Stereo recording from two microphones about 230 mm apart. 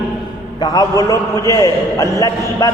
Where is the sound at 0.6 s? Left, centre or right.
Centre.